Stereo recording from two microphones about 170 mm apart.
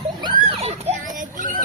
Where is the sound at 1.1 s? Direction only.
50° right (ahead or behind).